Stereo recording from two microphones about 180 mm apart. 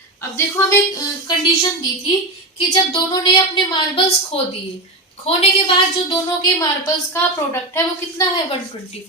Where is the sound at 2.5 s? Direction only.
25° left (ahead or behind).